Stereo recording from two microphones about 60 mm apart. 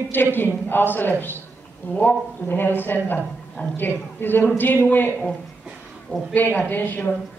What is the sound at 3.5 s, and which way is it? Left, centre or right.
Speech, centre.